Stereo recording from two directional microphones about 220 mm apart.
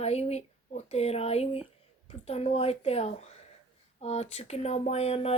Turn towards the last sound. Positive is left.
turn(degrees=30)  # may be behind; listen again after turning